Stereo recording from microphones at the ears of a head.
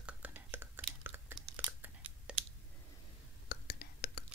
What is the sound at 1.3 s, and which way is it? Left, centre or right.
Chewing, right.